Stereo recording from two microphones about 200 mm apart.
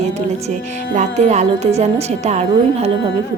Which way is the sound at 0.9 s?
35° right (ahead or behind).